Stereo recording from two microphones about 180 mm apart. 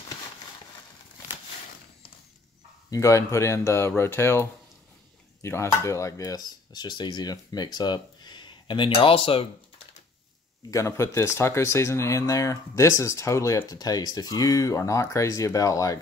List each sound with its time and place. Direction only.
2.9 s speech: 15° left (ahead or behind)
10.7 s speech: 15° left (ahead or behind)